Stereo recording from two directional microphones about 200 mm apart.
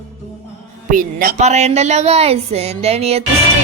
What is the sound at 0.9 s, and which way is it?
Speech, 40° right (ahead or behind).